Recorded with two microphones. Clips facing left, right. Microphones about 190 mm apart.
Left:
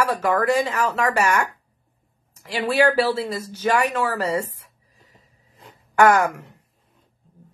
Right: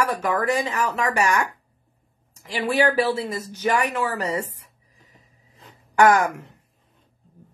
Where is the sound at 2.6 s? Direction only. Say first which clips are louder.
Left 2 dB; 15° right (ahead or behind).